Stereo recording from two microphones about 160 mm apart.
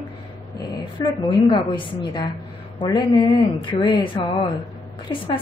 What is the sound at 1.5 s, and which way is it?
A woman's voice, 30° left (ahead or behind).